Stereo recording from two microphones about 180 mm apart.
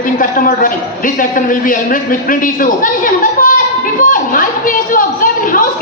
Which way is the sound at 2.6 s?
50° left (ahead or behind).